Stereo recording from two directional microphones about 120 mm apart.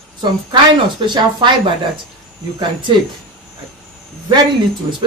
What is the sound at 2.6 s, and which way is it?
Speech, 40° right (ahead or behind).